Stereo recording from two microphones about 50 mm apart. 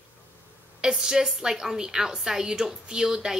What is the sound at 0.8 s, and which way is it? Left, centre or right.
A woman's voice, centre.